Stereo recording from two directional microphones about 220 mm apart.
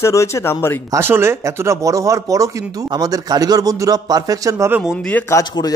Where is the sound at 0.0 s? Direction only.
15° left (ahead or behind).